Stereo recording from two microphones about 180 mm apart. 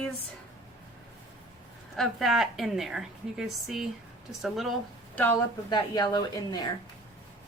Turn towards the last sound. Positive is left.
turn(degrees=25)  # may be behind; listen again after turning